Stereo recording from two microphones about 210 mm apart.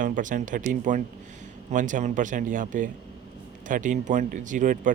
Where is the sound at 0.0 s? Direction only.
40° right (ahead or behind).